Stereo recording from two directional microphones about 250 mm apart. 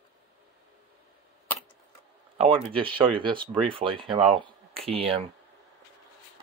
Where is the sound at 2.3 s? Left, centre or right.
Right.